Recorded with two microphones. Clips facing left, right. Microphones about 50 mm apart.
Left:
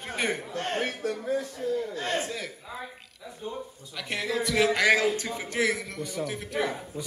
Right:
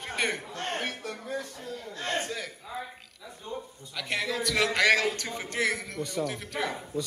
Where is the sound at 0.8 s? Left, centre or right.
Left.